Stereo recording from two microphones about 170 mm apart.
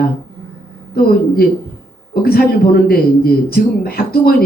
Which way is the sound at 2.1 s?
60° left (ahead or behind).